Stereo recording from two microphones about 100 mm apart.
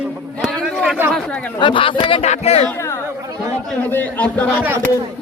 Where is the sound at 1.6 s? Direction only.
60° left (ahead or behind); by 2.6 s 90° left.